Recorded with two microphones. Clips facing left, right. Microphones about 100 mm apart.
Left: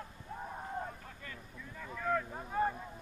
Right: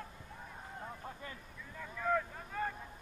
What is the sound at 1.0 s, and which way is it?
Vehicle, 25° right (ahead or behind).